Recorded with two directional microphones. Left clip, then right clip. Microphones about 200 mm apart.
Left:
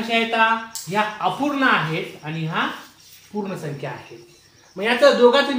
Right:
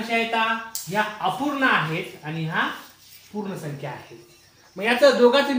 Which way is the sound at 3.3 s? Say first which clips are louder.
Left 4 dB; centre (ahead or behind).